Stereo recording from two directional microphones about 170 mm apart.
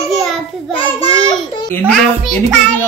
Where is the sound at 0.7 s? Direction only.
35° left (ahead or behind).